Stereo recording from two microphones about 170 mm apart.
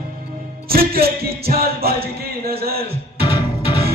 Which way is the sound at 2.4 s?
65° right (ahead or behind).